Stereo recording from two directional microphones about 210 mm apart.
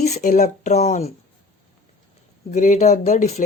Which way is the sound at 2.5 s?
35° left (ahead or behind).